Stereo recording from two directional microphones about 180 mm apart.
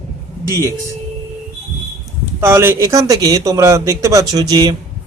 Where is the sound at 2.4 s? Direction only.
15° right (ahead or behind).